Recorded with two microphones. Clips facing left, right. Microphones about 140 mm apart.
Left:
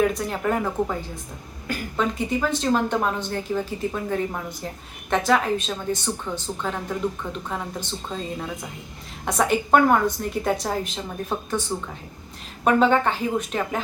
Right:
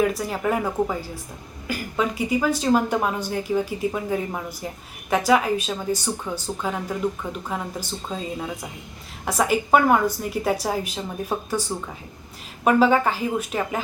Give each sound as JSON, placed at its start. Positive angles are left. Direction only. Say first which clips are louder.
{"t": 0.0, "sound": "a woman's voice", "louder": "even", "side_deg": -5}
{"t": 12.6, "sound": "a woman's voice", "louder": "right 1 dB", "side_deg": -5}